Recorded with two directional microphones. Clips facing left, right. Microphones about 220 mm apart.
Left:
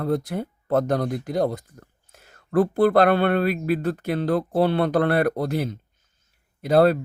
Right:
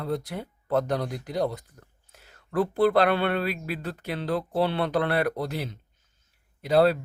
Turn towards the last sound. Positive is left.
turn(degrees=50)  # may be behind; listen again after turning